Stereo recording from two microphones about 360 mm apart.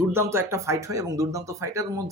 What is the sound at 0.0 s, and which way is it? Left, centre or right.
Speech, centre.